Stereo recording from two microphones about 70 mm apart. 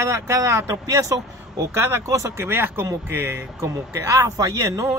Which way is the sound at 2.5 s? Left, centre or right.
Right.